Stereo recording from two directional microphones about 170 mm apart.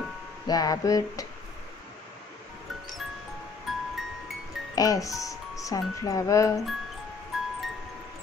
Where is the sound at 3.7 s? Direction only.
Centre (ahead or behind).